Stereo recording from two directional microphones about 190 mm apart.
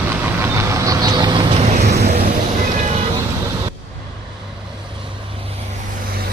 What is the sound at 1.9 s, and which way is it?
Vehicle, 60° right (ahead or behind).